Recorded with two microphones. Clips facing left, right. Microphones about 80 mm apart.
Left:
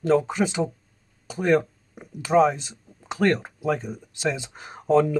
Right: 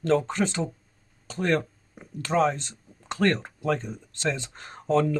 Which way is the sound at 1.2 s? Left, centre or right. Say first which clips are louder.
Left 4 dB; centre.